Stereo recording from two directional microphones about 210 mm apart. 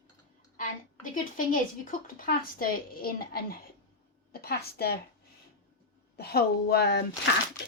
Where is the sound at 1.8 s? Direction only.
40° left (ahead or behind).